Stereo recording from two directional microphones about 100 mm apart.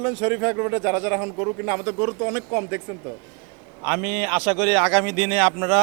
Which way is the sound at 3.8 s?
15° right (ahead or behind).